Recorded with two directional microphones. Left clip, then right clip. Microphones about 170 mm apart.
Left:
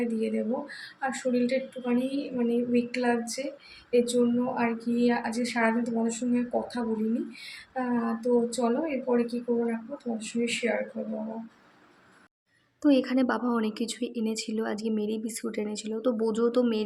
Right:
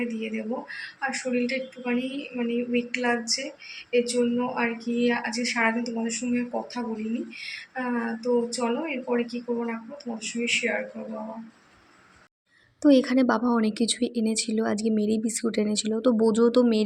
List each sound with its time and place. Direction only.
0.0 s a woman's voice: 15° left (ahead or behind)
12.8 s a woman's voice: 20° right (ahead or behind)